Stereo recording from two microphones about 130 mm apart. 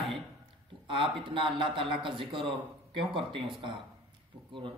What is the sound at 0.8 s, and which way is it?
A man's voice, 40° right (ahead or behind).